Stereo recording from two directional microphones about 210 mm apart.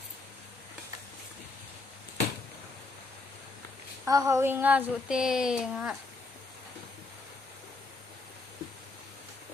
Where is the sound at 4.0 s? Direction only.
15° right (ahead or behind).